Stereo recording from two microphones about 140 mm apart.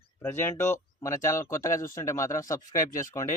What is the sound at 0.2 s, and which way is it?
Speech, 15° left (ahead or behind).